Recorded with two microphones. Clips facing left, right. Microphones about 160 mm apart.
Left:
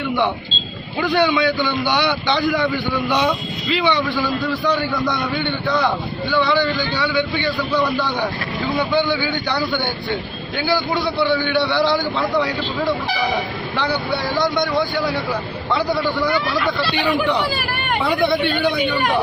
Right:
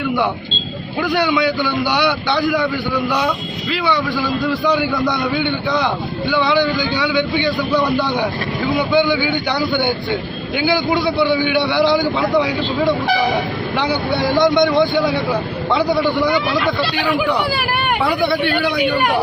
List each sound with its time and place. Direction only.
1.0 s a man's voice: 10° right (ahead or behind)
3.7 s a man's voice: 5° right (ahead or behind)
14.5 s a man's voice: 20° right (ahead or behind)